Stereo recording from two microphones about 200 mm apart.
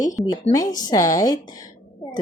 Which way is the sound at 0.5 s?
15° left (ahead or behind).